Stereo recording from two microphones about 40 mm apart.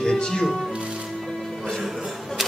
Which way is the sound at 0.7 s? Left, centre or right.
Right.